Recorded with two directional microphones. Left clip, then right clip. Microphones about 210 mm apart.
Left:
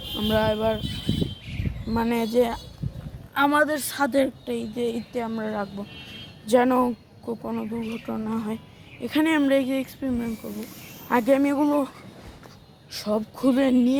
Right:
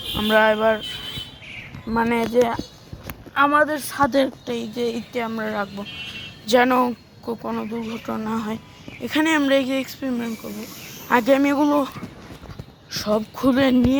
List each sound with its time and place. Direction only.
0.2 s speech: centre (ahead or behind)
1.9 s speech: centre (ahead or behind); by 6.9 s 15° left (ahead or behind)
7.4 s speech: centre (ahead or behind)